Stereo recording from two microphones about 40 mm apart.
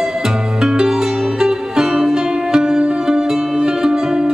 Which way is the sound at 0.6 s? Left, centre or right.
Centre.